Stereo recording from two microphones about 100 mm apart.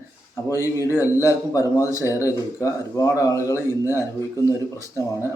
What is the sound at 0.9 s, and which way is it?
Speech, 30° left (ahead or behind).